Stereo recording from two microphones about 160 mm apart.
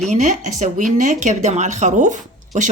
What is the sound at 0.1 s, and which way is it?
Speech, 50° right (ahead or behind).